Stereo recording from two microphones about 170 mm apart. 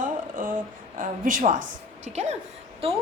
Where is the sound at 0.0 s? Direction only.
55° right (ahead or behind).